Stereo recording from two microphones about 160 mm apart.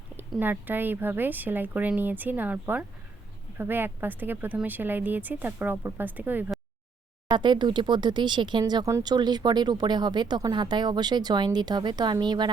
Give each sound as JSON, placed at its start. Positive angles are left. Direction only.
{"t": 0.2, "sound": "speech", "side_deg": -10}
{"t": 7.3, "sound": "speech", "side_deg": -30}